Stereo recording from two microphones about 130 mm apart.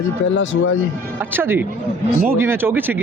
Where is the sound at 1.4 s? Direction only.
15° right (ahead or behind).